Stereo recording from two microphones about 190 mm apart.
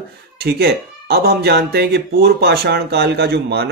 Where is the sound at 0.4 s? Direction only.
55° right (ahead or behind).